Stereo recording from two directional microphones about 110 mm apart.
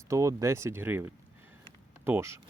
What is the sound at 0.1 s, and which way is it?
Speech, 30° right (ahead or behind).